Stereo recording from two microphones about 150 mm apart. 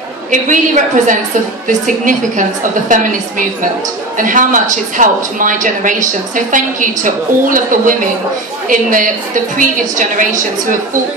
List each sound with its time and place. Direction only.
0.3 s speech: 55° right (ahead or behind)
4.2 s speech: 60° right (ahead or behind)